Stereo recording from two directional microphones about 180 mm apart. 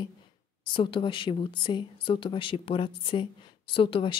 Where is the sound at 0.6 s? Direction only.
25° left (ahead or behind).